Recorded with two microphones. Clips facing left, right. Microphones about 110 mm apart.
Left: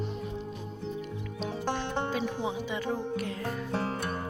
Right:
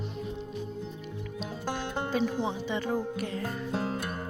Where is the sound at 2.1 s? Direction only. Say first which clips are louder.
Right 2 dB; 5° left (ahead or behind).